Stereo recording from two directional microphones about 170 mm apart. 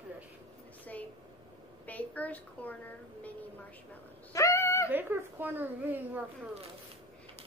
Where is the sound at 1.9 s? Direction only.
10° left (ahead or behind).